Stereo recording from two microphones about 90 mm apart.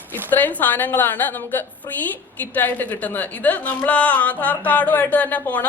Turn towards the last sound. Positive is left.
turn(degrees=15)  # may be behind; listen again after turning